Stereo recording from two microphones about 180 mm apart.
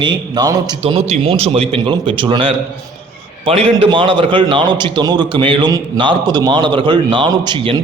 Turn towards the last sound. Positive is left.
turn(degrees=-25)  # may be behind; listen again after turning